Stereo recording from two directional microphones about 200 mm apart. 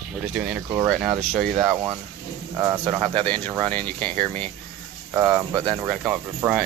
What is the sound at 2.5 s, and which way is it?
Speech, 15° right (ahead or behind).